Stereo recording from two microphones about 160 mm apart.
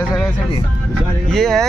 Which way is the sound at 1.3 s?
5° left (ahead or behind).